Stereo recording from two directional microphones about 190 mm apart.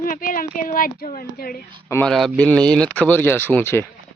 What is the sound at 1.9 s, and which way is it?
Speech, 5° left (ahead or behind).